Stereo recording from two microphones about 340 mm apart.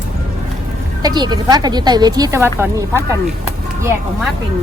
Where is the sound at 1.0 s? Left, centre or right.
Centre.